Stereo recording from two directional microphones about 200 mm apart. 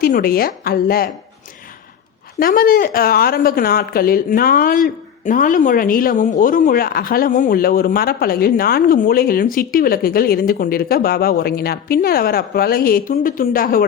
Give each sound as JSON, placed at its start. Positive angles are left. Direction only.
{"t": 0.0, "sound": "a woman's voice", "side_deg": 45}
{"t": 2.4, "sound": "a woman's voice", "side_deg": 45}